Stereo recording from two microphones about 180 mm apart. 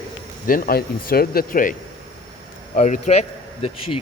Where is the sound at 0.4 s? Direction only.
50° left (ahead or behind).